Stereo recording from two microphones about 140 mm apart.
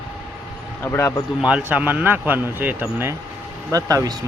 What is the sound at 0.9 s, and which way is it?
Speech, 20° left (ahead or behind).